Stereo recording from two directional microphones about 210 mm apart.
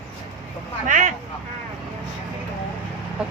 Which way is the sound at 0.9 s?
35° right (ahead or behind).